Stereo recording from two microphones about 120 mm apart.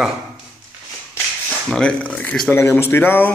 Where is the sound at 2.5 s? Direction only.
20° left (ahead or behind).